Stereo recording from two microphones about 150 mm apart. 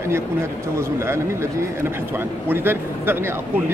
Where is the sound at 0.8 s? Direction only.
20° right (ahead or behind).